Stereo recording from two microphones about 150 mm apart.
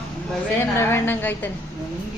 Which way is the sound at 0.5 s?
15° left (ahead or behind).